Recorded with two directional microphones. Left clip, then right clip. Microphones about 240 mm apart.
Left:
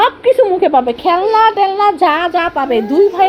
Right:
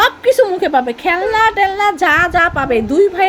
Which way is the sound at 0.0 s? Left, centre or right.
Right.